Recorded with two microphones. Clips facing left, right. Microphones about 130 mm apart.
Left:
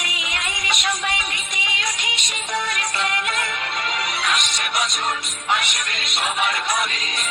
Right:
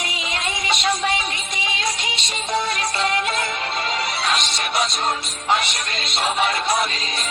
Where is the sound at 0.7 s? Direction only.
30° right (ahead or behind).